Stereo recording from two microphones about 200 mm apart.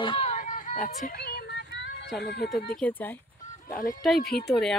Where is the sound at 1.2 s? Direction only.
50° left (ahead or behind).